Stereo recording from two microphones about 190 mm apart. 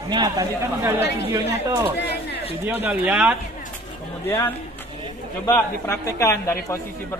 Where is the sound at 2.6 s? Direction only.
10° right (ahead or behind).